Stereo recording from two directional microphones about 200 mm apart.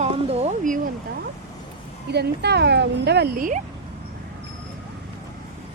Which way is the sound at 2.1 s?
55° right (ahead or behind).